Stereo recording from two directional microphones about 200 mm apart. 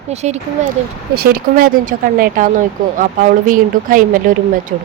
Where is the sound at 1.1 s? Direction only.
50° right (ahead or behind).